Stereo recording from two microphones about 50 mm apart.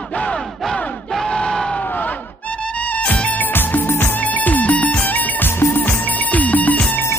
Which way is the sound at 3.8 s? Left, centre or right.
Left.